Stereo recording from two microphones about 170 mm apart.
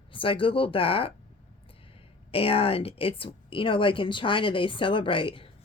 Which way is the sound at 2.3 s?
35° left (ahead or behind).